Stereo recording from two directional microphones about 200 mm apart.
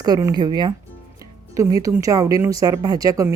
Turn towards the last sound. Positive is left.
turn(degrees=-15)  # may be behind; listen again after turning